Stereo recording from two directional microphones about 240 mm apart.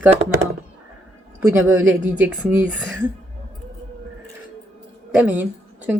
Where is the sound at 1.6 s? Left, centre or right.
Right.